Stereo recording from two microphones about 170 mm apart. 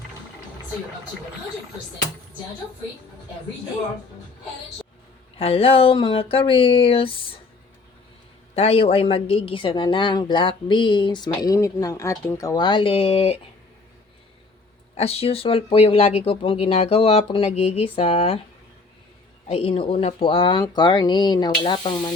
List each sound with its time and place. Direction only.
5.4 s speech: 35° left (ahead or behind)
8.5 s a woman's voice: 35° left (ahead or behind)
14.9 s speech: 35° left (ahead or behind)
19.5 s a woman's voice: 35° left (ahead or behind)